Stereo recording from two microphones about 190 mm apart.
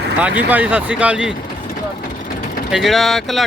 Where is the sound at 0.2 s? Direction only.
5° right (ahead or behind).